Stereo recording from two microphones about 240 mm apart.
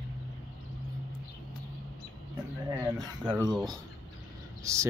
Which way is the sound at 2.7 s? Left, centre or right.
Centre.